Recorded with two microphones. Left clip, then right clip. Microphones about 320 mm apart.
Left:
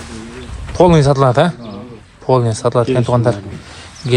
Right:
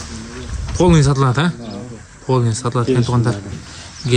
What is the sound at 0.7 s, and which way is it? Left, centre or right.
A man's voice, centre.